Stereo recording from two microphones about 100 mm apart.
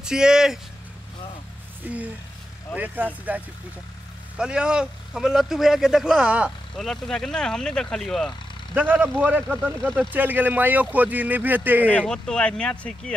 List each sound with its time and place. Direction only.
0.0 s speech: 5° right (ahead or behind)
1.9 s speech: 15° right (ahead or behind)
6.8 s speech: 5° left (ahead or behind)
8.7 s speech: 15° right (ahead or behind)
11.9 s speech: 10° left (ahead or behind)